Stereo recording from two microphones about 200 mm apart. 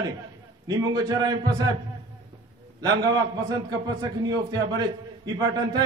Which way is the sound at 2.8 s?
20° right (ahead or behind).